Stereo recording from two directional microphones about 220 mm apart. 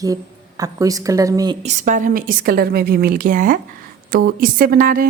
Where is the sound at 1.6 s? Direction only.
35° right (ahead or behind).